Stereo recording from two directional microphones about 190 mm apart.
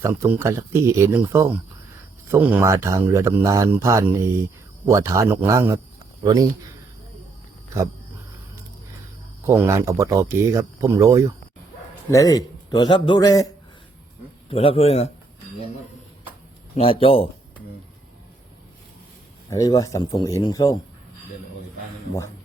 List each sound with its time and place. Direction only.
0.0 s speech: 15° right (ahead or behind)
9.5 s speech: 15° right (ahead or behind)
12.1 s a man's voice: 20° left (ahead or behind)
14.5 s a man's voice: 30° left (ahead or behind)
16.7 s a man's voice: 30° left (ahead or behind)
19.5 s a man's voice: 15° left (ahead or behind)